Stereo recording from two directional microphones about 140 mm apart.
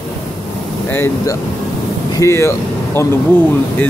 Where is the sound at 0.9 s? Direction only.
20° left (ahead or behind).